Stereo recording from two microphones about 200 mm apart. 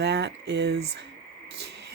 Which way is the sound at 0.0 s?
60° right (ahead or behind).